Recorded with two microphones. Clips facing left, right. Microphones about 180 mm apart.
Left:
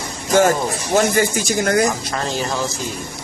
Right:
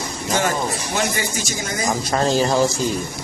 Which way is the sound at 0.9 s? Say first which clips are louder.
Left 10 dB; 50° left (ahead or behind).